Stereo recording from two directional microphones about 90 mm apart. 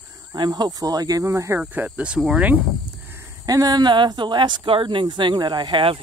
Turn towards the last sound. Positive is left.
turn(degrees=-60)  # may be behind; listen again after turning